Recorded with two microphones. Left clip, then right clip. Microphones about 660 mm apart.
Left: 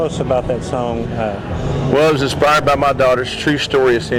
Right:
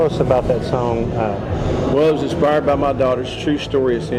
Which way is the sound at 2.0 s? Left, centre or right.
Left.